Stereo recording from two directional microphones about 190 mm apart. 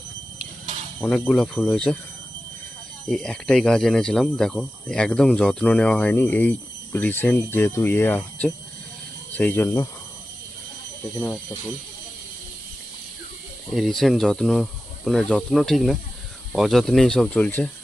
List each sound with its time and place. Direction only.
1.0 s speech: 5° left (ahead or behind)
3.1 s speech: centre (ahead or behind)
13.7 s speech: centre (ahead or behind)